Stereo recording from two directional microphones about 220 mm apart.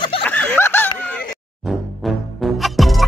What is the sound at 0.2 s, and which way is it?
Snicker, 5° left (ahead or behind).